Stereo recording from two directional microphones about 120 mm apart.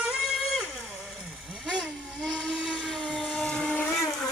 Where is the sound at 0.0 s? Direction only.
5° right (ahead or behind).